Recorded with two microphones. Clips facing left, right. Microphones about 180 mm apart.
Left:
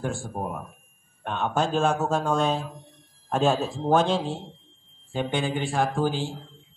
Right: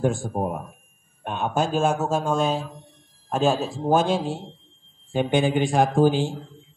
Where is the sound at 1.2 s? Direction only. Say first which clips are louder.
Right 1 dB; 10° right (ahead or behind).